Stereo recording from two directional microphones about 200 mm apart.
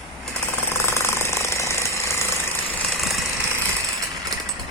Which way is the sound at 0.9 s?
10° left (ahead or behind).